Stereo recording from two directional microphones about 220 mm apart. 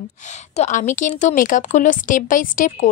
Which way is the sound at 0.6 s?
35° left (ahead or behind).